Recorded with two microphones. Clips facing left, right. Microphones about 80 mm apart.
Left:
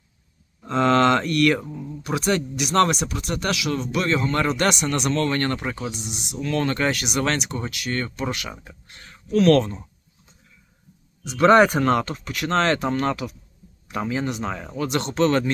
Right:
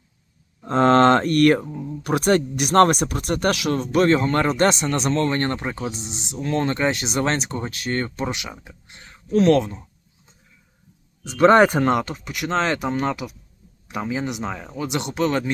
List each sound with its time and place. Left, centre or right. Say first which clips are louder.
0.7 s mantra: right 3 dB; right
2.0 s speech: right 4 dB; right
8.2 s speech: right 1 dB; centre
9.5 s speech: left 2 dB; centre
11.2 s speech: right 1 dB; right
11.9 s speech: even; centre
14.8 s speech: left 2 dB; centre